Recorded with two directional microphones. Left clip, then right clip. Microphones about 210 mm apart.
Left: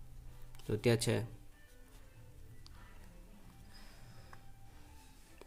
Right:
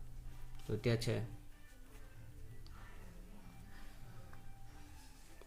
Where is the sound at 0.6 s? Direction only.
45° left (ahead or behind).